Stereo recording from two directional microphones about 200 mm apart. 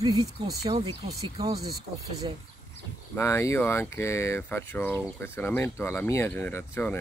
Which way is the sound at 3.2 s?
15° left (ahead or behind).